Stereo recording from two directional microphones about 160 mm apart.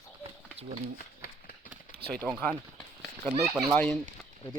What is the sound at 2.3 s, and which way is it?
Speech, 5° left (ahead or behind).